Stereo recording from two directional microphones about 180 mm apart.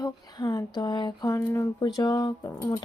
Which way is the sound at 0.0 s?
20° left (ahead or behind).